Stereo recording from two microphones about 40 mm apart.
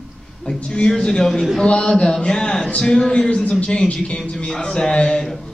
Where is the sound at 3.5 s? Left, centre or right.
Left.